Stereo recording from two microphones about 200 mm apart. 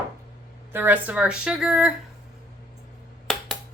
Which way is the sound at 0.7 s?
10° right (ahead or behind).